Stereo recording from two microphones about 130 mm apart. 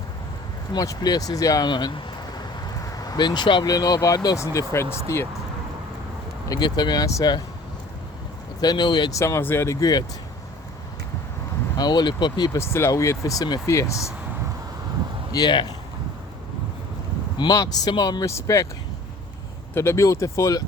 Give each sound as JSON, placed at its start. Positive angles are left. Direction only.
{"t": 0.7, "sound": "speech", "side_deg": 30}
{"t": 6.5, "sound": "speech", "side_deg": 35}
{"t": 8.6, "sound": "speech", "side_deg": 35}
{"t": 11.8, "sound": "speech", "side_deg": 30}
{"t": 12.5, "sound": "speech", "side_deg": 20}
{"t": 15.3, "sound": "speech", "side_deg": 35}
{"t": 17.3, "sound": "speech", "side_deg": 30}
{"t": 19.7, "sound": "speech", "side_deg": 20}